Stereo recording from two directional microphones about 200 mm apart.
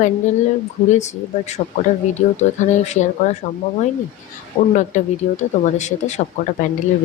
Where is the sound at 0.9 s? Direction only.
35° left (ahead or behind).